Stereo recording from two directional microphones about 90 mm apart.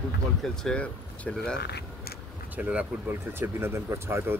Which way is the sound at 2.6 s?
15° right (ahead or behind).